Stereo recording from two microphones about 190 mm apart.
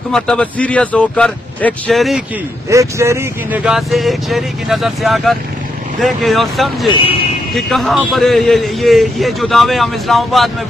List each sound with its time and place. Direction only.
0.1 s a man's voice: 5° left (ahead or behind)
2.7 s a man's voice: 15° right (ahead or behind); by 6.9 s centre (ahead or behind)
6.9 s speech: 25° left (ahead or behind)
7.5 s a man's voice: centre (ahead or behind)